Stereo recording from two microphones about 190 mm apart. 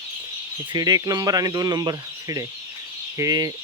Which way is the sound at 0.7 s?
20° right (ahead or behind).